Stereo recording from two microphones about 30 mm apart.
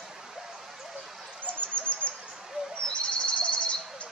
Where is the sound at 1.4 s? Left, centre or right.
Left.